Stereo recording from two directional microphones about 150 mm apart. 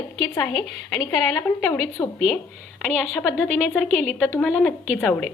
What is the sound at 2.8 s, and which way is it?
A woman's voice, 5° left (ahead or behind).